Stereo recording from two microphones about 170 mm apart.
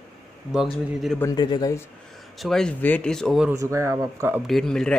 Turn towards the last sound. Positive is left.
turn(degrees=5)  # may be behind; listen again after turning